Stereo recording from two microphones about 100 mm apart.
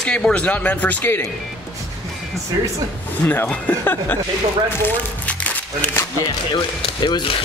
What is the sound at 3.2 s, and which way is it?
Speech, 20° left (ahead or behind).